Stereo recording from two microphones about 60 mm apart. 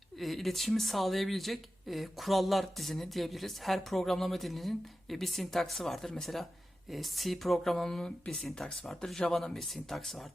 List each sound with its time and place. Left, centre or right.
0.2 s speech: centre
8.9 s speech: centre